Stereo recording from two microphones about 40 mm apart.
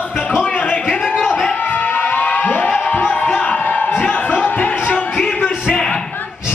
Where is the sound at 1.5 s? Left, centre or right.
Left.